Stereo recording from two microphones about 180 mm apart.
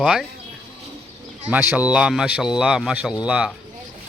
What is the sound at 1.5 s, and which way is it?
Speech, 10° right (ahead or behind).